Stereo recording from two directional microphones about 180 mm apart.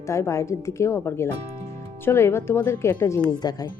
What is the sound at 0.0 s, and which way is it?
Speech, 15° left (ahead or behind).